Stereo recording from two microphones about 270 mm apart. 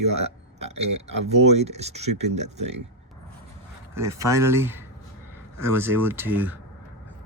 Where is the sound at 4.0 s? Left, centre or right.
Centre.